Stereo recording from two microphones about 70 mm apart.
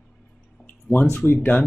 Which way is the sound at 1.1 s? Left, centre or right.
Left.